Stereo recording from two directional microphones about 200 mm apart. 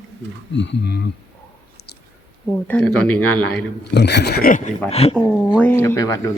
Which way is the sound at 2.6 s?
5° left (ahead or behind).